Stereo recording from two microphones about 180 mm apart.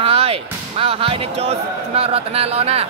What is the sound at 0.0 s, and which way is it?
Speech, 30° right (ahead or behind).